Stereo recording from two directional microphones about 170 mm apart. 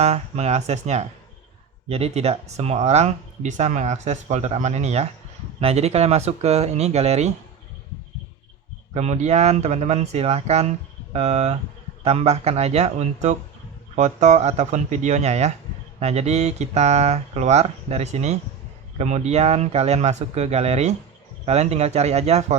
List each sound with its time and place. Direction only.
0.0 s speech: 40° right (ahead or behind)
9.0 s speech: 40° right (ahead or behind)